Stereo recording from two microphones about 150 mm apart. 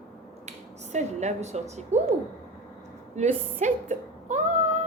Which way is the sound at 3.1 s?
50° right (ahead or behind).